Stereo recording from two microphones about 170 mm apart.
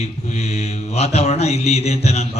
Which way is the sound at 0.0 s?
40° left (ahead or behind).